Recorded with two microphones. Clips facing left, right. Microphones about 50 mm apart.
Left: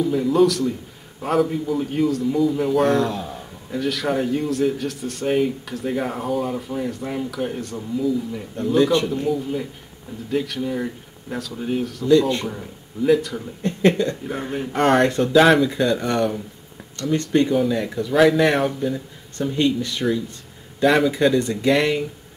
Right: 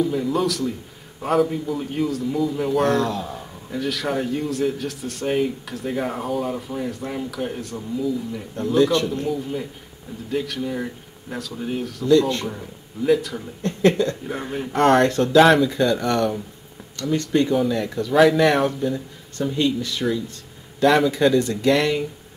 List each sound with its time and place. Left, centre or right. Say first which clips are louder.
0.0 s a man's voice: left 4 dB; centre
12.1 s speech: left 1 dB; centre
12.4 s speech: left 1 dB; centre
13.6 s speech: even; centre
14.2 s a man's voice: left 1 dB; centre
15.0 s speech: even; centre
15.3 s a man's voice: right 1 dB; centre
21.4 s speech: even; left